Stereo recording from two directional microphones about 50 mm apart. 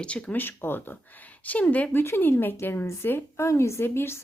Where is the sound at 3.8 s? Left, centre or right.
Left.